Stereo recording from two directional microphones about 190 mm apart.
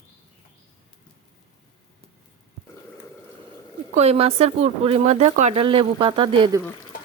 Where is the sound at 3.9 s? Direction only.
35° right (ahead or behind).